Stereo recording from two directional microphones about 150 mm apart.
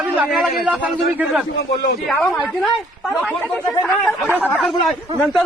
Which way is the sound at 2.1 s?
5° left (ahead or behind).